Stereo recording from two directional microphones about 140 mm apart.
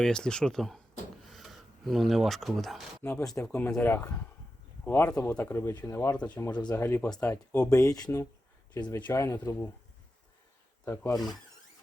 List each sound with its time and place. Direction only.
0.0 s speech: 5° left (ahead or behind)
3.0 s speech: 15° left (ahead or behind)
6.1 s speech: 10° left (ahead or behind)
6.4 s speech: 30° left (ahead or behind)
6.7 s speech: 15° left (ahead or behind)
10.8 s speech: 20° left (ahead or behind)